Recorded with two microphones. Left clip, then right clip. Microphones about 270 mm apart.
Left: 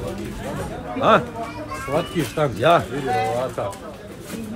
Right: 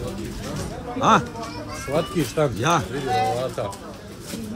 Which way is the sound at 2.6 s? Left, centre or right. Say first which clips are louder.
Left 8 dB; centre.